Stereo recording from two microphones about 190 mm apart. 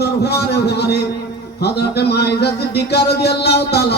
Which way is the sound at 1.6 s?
60° left (ahead or behind).